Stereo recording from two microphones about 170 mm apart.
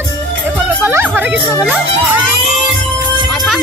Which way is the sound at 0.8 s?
10° right (ahead or behind).